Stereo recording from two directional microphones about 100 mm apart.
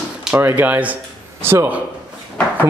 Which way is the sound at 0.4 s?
20° right (ahead or behind).